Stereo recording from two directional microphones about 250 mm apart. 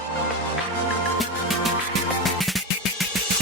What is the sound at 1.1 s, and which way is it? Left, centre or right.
Music, centre.